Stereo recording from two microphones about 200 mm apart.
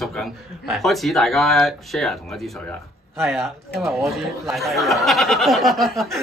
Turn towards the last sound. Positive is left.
turn(degrees=0)  # may be behind; listen again after turning